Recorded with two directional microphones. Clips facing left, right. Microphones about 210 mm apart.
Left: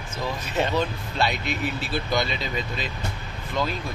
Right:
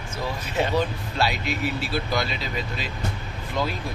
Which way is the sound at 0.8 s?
5° right (ahead or behind).